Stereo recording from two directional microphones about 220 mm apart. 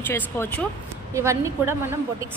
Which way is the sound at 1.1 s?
15° right (ahead or behind).